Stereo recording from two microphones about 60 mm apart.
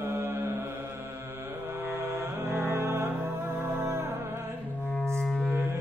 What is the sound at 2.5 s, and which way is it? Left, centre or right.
Music, right.